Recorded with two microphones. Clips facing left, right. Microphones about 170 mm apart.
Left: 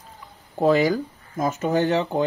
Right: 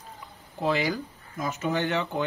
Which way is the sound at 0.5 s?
45° left (ahead or behind).